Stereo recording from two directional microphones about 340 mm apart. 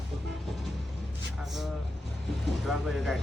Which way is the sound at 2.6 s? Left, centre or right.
Centre.